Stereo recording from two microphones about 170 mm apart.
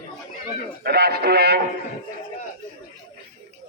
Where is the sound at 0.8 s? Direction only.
65° right (ahead or behind).